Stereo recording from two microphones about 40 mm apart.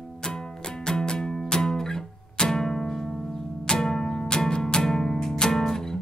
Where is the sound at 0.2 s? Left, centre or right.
Centre.